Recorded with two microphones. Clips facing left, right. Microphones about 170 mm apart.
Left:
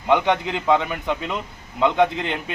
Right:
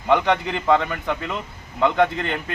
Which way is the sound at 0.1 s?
15° left (ahead or behind).